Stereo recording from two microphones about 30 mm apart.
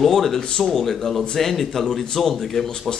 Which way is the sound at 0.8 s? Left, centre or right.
Centre.